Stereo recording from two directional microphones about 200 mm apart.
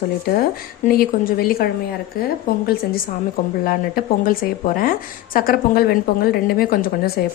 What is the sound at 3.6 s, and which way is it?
A woman's voice, 45° left (ahead or behind).